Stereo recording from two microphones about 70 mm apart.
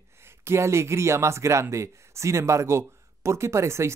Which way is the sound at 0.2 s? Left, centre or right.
Right.